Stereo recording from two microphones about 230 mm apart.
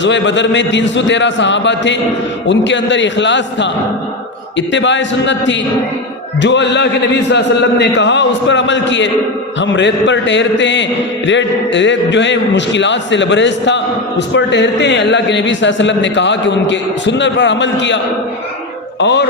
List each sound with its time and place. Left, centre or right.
0.0 s a man's voice: left